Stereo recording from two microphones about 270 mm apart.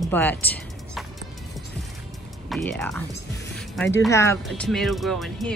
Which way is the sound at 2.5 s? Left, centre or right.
Centre.